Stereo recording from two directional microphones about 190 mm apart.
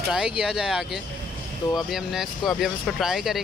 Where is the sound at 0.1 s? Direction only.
Centre (ahead or behind).